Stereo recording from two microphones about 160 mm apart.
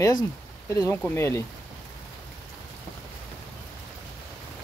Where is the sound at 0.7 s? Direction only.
20° left (ahead or behind).